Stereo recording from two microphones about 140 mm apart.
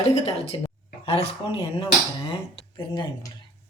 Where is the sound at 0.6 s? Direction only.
45° left (ahead or behind).